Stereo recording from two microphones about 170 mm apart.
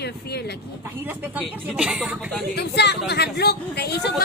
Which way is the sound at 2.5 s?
80° left.